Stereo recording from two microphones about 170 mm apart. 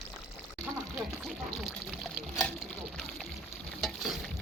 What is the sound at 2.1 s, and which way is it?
Speech, centre (ahead or behind).